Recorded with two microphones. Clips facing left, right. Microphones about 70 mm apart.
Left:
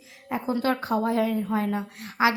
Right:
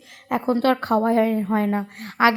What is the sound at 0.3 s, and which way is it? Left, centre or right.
Speech, right.